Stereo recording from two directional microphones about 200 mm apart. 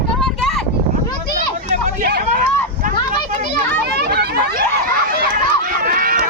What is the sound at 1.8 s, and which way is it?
Hubbub, 50° right (ahead or behind).